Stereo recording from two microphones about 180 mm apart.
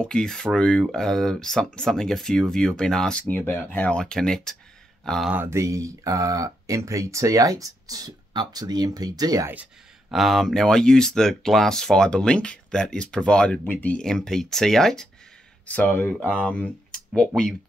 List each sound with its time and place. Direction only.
0.0 s speech: 5° left (ahead or behind)
5.3 s speech: 15° right (ahead or behind)
10.1 s speech: centre (ahead or behind)